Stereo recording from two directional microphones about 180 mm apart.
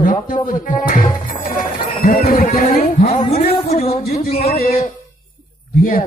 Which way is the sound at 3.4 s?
35° left (ahead or behind).